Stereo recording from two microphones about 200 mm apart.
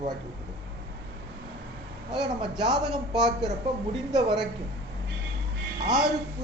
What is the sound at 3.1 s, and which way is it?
Speech, 5° right (ahead or behind).